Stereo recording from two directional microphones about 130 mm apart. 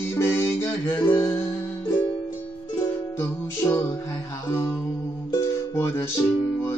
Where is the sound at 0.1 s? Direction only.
20° left (ahead or behind).